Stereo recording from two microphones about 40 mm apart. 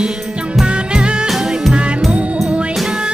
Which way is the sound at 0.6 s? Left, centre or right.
Right.